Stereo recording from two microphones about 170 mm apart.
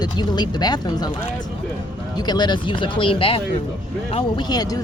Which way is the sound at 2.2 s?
25° left (ahead or behind).